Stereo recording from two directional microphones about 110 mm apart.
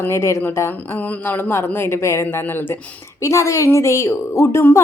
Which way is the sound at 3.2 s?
30° left (ahead or behind).